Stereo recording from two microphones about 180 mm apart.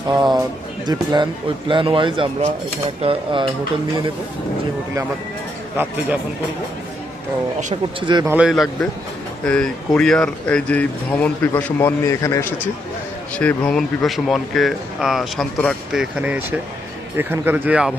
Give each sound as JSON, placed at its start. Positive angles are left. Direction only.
{"t": 0.1, "sound": "speech", "side_deg": -20}
{"t": 5.7, "sound": "speech", "side_deg": -10}
{"t": 8.0, "sound": "speech", "side_deg": -25}
{"t": 8.3, "sound": "speech", "side_deg": -5}